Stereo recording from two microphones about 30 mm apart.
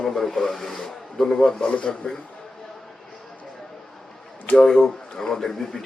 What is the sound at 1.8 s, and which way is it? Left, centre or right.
Speech, left.